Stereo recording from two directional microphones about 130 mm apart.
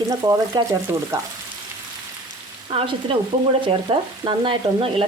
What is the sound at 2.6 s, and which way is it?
Frying, 45° right (ahead or behind).